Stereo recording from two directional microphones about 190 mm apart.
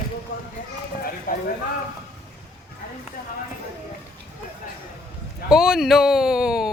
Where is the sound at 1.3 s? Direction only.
45° left (ahead or behind).